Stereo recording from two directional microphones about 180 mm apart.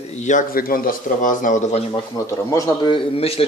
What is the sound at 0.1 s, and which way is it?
Speech, 40° left (ahead or behind).